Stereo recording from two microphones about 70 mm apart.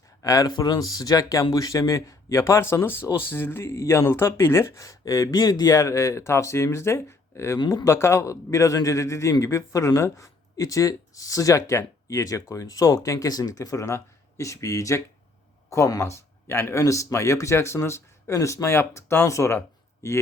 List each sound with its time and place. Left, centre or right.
0.2 s speech: left
0.5 s speech: left
7.6 s speech: left
7.9 s speech: left
13.8 s speech: left
16.8 s speech: left